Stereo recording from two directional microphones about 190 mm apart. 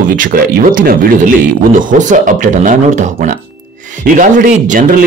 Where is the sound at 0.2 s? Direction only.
50° right (ahead or behind).